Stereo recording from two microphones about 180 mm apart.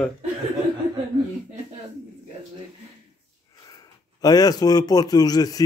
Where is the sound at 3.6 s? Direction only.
20° left (ahead or behind).